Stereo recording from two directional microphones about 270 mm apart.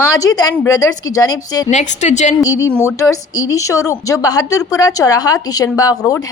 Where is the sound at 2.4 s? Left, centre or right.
Centre.